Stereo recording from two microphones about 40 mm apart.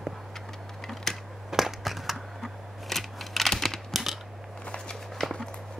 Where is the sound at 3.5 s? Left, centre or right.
Centre.